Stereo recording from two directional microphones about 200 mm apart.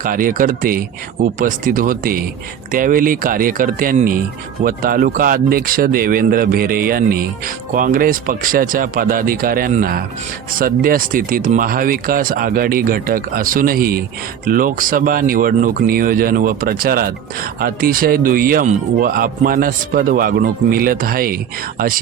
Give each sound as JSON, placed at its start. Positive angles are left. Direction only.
{"t": 0.0, "sound": "speech", "side_deg": -45}